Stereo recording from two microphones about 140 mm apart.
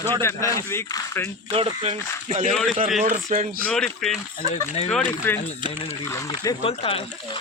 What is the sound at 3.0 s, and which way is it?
Speech, 65° right (ahead or behind).